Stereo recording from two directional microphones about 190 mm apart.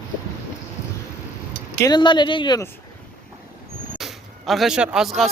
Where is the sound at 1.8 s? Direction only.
20° left (ahead or behind).